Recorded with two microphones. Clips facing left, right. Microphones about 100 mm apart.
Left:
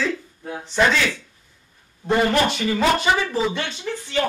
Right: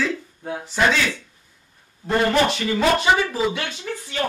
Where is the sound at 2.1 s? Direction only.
Centre (ahead or behind).